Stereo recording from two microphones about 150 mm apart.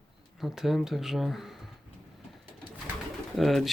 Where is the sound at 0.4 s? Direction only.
Centre (ahead or behind).